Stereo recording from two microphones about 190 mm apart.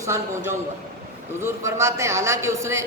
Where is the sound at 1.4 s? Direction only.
15° right (ahead or behind).